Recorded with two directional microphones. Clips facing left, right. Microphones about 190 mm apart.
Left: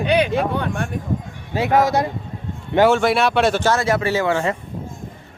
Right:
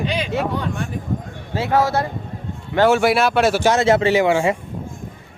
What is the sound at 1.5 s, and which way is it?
Speech, 15° left (ahead or behind).